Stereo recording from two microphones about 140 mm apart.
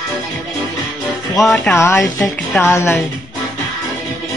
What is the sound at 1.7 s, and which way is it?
Speech, 20° left (ahead or behind).